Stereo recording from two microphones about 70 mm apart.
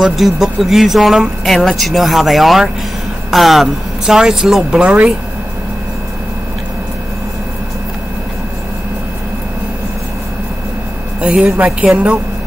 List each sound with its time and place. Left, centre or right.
0.0 s speech: centre
11.1 s speech: centre